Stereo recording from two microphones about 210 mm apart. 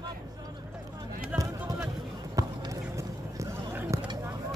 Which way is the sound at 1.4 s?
15° right (ahead or behind).